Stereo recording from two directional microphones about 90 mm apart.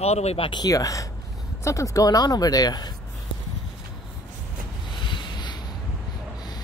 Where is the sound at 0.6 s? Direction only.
40° left (ahead or behind).